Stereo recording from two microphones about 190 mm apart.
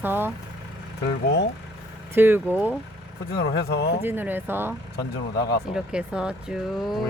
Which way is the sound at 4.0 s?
10° right (ahead or behind).